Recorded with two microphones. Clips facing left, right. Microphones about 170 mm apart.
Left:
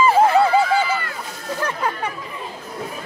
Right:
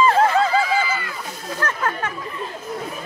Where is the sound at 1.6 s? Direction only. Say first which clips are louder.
Even; 15° left (ahead or behind).